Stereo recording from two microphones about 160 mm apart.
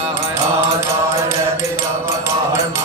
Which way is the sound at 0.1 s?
15° right (ahead or behind).